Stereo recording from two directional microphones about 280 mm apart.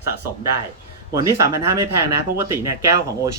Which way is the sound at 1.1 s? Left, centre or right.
Centre.